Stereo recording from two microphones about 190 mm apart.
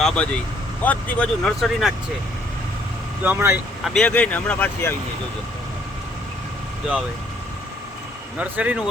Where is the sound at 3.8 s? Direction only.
5° left (ahead or behind).